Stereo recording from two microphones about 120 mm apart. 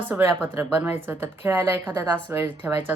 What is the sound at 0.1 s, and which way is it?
Speech, 15° right (ahead or behind).